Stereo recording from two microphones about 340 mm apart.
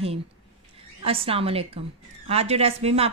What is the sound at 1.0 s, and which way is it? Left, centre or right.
A woman's voice, centre.